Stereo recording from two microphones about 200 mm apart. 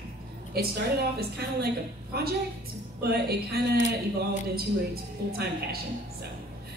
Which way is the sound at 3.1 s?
50° right (ahead or behind).